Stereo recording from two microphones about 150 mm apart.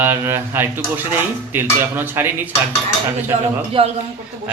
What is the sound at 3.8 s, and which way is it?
Speech, 40° right (ahead or behind).